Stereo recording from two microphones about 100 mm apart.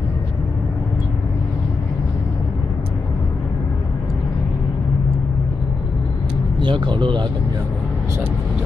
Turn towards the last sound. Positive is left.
turn(degrees=-55)  # may be behind; listen again after turning